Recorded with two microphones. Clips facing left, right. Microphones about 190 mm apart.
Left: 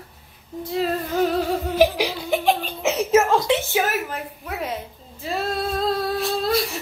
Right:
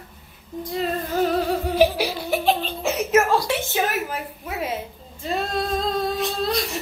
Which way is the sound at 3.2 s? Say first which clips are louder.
Left 2 dB; 20° left (ahead or behind).